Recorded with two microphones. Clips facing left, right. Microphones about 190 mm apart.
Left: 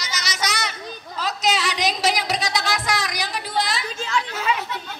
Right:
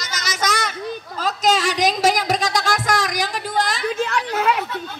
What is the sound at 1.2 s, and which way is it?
Speech, 45° right (ahead or behind).